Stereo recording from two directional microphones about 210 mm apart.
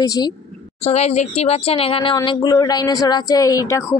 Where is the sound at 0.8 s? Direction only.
30° left (ahead or behind).